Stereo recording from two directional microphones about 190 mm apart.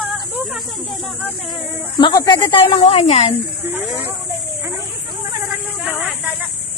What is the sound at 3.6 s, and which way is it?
Speech, 10° right (ahead or behind).